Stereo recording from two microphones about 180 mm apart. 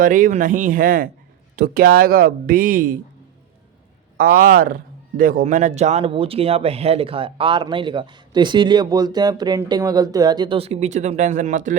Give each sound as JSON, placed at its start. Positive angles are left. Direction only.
{"t": 0.0, "sound": "speech", "side_deg": -50}
{"t": 4.2, "sound": "speech", "side_deg": -55}